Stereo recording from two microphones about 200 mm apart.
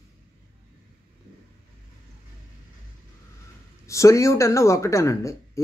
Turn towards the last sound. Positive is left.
turn(degrees=15)  # may be behind; listen again after turning